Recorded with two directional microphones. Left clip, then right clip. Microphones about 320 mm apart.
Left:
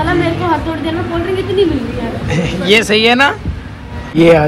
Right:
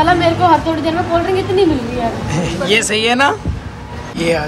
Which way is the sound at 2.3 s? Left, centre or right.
Centre.